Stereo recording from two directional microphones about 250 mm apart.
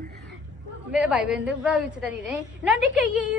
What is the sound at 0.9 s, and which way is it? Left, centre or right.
A woman's voice, centre.